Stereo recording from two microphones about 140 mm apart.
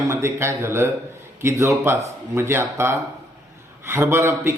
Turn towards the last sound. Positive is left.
turn(degrees=-20)  # may be behind; listen again after turning